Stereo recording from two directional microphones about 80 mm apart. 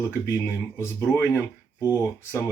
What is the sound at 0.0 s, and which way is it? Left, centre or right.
Speech, left.